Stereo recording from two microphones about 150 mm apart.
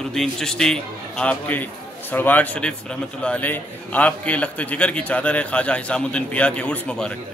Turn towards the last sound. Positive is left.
turn(degrees=5)  # may be behind; listen again after turning